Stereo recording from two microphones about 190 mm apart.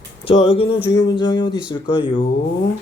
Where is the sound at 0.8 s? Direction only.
65° left (ahead or behind).